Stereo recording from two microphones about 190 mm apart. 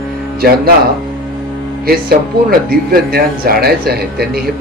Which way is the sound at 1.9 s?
55° right (ahead or behind).